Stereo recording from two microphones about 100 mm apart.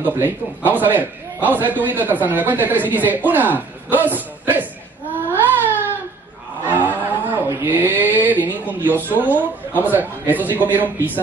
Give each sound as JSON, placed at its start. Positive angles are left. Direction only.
{"t": 0.0, "sound": "a man's voice", "side_deg": -20}
{"t": 5.3, "sound": "baby cry", "side_deg": -20}
{"t": 6.6, "sound": "a sound", "side_deg": -20}
{"t": 9.1, "sound": "a man's voice", "side_deg": -15}